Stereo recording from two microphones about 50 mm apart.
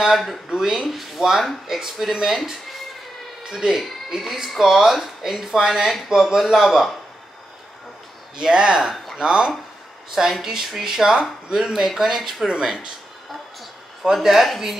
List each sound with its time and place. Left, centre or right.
0.0 s speech: centre
8.4 s speech: centre
8.9 s a sound: centre
9.2 s speech: centre
12.4 s speech: centre
14.0 s speech: centre